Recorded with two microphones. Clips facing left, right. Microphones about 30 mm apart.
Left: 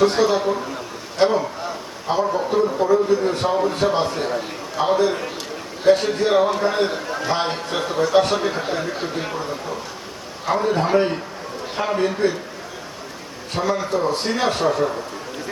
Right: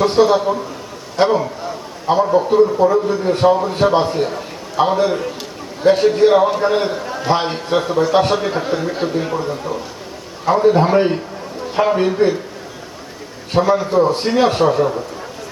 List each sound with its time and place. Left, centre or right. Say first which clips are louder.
0.0 s a man's voice: right 4 dB; centre
4.8 s a man's voice: right 4 dB; right
5.8 s a man's voice: right 5 dB; centre
7.3 s a man's voice: right 6 dB; centre
10.4 s a man's voice: right 7 dB; centre
13.5 s a man's voice: right 7 dB; centre